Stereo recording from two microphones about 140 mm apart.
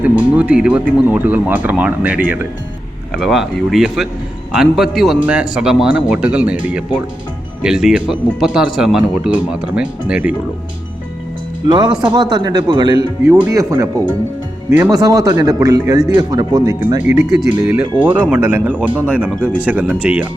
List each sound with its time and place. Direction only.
0.0 s speech: 10° right (ahead or behind)
3.2 s speech: centre (ahead or behind)
12.0 s speech: 30° right (ahead or behind)
17.0 s speech: 5° right (ahead or behind)